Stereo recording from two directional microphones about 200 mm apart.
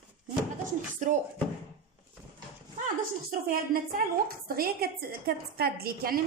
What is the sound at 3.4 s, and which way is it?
A woman's voice, 45° right (ahead or behind).